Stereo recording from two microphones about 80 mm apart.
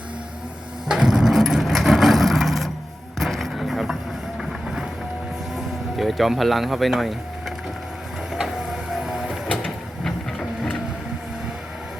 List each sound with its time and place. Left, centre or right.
0.9 s vehicle: centre
4.4 s music: centre
5.5 s speech: centre
8.3 s printer: centre
9.5 s printer: centre